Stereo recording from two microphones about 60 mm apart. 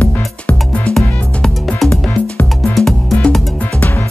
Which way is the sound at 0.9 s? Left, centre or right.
Centre.